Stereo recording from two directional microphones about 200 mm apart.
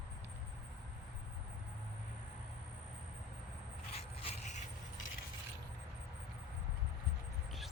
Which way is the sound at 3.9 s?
30° left (ahead or behind).